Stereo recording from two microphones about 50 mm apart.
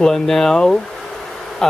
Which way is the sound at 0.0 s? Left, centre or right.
Centre.